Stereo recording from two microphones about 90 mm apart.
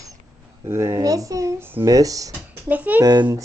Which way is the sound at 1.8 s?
40° right (ahead or behind).